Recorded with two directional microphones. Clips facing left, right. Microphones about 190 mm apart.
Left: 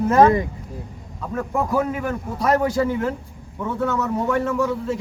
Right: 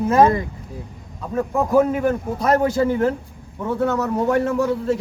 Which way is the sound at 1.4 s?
20° right (ahead or behind).